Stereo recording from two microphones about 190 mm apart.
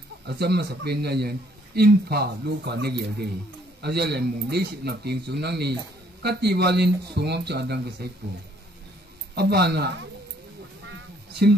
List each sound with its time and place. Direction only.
0.3 s speech: 60° right (ahead or behind)
9.3 s speech: 60° right (ahead or behind)